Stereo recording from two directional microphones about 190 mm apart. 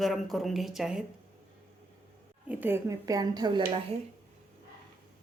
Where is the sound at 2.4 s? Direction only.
10° right (ahead or behind); by 3.8 s 25° right (ahead or behind).